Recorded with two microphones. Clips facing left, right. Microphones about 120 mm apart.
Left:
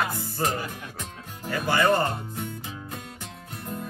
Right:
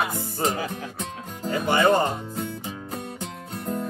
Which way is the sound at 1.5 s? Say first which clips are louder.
Right 3 dB; 20° right (ahead or behind).